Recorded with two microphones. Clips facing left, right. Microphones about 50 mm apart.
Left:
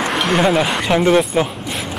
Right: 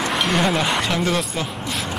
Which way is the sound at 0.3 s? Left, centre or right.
Centre.